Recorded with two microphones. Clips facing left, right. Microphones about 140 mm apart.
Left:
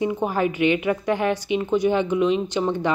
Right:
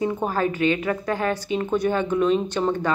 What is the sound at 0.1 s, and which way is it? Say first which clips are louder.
A woman's voice: left 1 dB; 15° left (ahead or behind).